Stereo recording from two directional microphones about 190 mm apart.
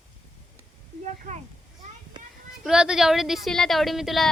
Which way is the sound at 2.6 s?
5° right (ahead or behind).